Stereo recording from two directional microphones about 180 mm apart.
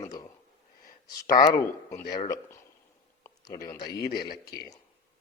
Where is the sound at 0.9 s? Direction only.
55° left (ahead or behind).